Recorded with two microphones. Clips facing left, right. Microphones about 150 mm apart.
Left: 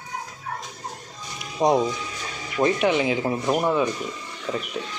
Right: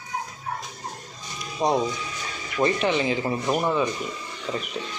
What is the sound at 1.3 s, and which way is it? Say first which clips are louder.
Music: left 3 dB; 20° left (ahead or behind).